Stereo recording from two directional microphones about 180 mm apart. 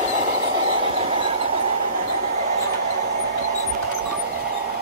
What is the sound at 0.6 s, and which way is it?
Train, 30° right (ahead or behind).